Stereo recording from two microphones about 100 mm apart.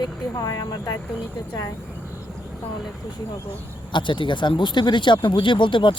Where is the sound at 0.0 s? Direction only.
40° left (ahead or behind).